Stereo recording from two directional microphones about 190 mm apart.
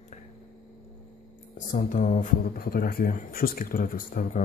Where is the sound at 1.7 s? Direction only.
40° left (ahead or behind).